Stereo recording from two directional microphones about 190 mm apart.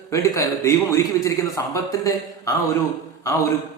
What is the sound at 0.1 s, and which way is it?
A man's voice, 15° left (ahead or behind).